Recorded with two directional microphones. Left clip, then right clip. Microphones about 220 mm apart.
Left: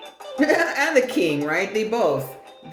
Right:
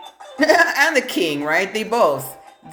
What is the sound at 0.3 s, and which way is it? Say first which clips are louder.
Speech: right 5 dB; 40° right (ahead or behind).